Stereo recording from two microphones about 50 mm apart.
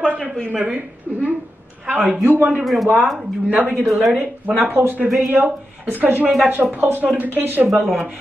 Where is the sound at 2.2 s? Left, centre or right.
Right.